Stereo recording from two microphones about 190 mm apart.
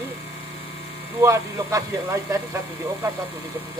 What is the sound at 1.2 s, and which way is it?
Speech, 15° right (ahead or behind).